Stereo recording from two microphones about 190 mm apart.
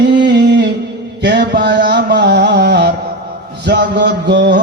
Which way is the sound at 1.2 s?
65° right (ahead or behind).